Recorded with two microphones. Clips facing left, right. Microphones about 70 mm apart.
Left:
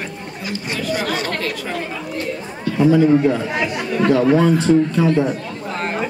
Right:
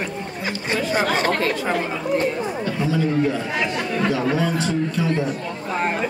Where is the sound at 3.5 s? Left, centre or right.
Centre.